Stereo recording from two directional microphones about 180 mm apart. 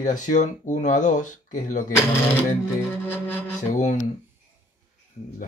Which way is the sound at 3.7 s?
45° left (ahead or behind).